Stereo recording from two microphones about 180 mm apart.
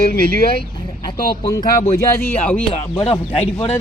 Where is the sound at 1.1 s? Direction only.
25° left (ahead or behind).